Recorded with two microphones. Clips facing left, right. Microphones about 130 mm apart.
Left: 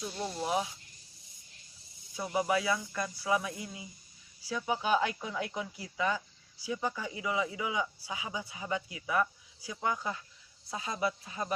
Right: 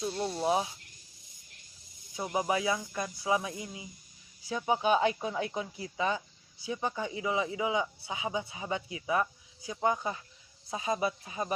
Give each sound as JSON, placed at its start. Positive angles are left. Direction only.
{"t": 0.3, "sound": "speech", "side_deg": -25}
{"t": 2.1, "sound": "speech", "side_deg": -20}